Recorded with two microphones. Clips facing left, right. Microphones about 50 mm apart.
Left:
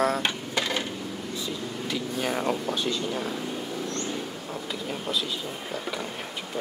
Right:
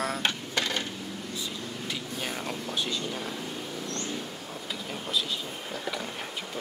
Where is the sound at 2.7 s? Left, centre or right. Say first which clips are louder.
Left 4 dB; centre.